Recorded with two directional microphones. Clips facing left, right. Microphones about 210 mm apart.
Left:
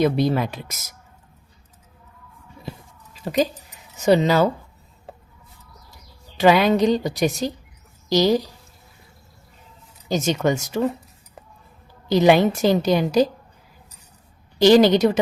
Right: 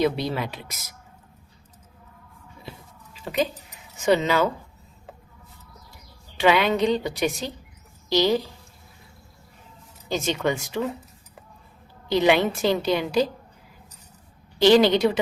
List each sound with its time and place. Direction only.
0.0 s a woman's voice: 45° left (ahead or behind)
3.2 s a woman's voice: 40° left (ahead or behind)
5.1 s a sound: 35° left (ahead or behind)
6.3 s a woman's voice: 40° left (ahead or behind)
10.1 s a woman's voice: 45° left (ahead or behind)
12.0 s a woman's voice: 40° left (ahead or behind)
14.6 s a woman's voice: 45° left (ahead or behind)